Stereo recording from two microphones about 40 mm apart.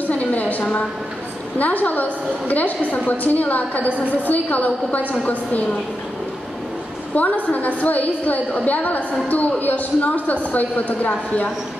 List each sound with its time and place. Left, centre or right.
0.0 s a sound: left
1.6 s a woman's voice: left
7.2 s a woman's voice: left